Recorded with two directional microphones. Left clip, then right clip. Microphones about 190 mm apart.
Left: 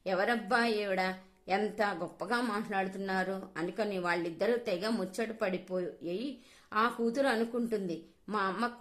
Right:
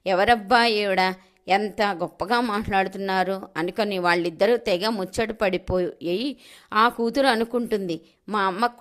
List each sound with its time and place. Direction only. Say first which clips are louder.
0.0 s a woman's voice: right 12 dB; 35° right (ahead or behind)